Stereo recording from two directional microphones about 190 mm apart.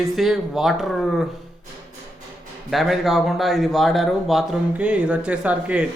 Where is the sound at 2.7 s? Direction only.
Centre (ahead or behind).